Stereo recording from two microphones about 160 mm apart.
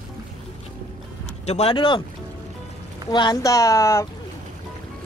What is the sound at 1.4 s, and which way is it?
Speech, 40° left (ahead or behind).